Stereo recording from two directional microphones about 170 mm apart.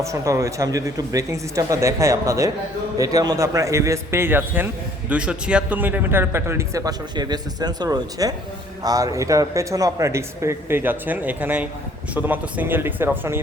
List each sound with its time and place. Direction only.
0.0 s a man's voice: 20° right (ahead or behind)